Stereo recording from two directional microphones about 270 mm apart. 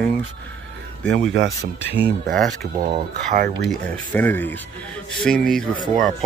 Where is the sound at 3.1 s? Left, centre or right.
Right.